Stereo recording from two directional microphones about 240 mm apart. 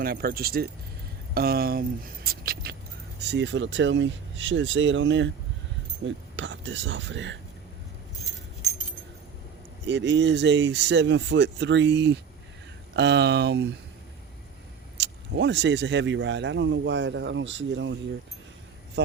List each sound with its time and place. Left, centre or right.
0.0 s speech: right
9.8 s speech: right
14.9 s speech: right
19.0 s a sound: right